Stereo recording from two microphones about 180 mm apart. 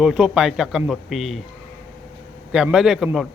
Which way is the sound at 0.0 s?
5° right (ahead or behind).